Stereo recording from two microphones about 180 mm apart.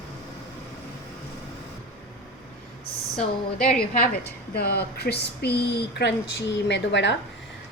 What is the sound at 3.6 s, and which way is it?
Speech, 50° left (ahead or behind).